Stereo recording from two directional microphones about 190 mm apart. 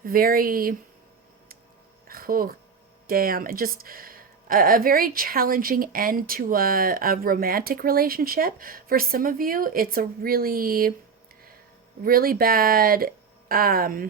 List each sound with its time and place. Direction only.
0.0 s a woman's voice: 50° right (ahead or behind)
2.0 s a woman's voice: 50° right (ahead or behind)
12.0 s a woman's voice: 50° right (ahead or behind)